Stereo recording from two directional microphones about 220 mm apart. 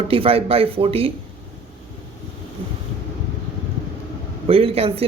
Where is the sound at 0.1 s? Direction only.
25° right (ahead or behind).